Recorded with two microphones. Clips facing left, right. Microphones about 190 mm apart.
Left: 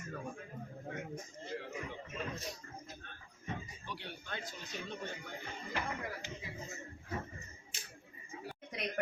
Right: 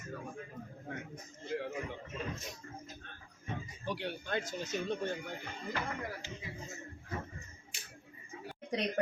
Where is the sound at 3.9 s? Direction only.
90° right.